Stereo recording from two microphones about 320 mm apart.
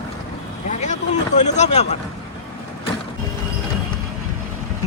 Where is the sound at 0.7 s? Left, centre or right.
Left.